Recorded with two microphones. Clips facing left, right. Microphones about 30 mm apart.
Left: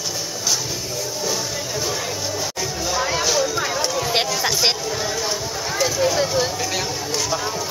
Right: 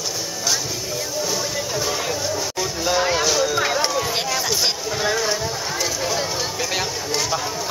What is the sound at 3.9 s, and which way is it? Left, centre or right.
Run, centre.